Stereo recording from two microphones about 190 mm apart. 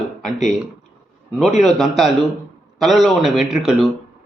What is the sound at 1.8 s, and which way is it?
A man's voice, centre (ahead or behind).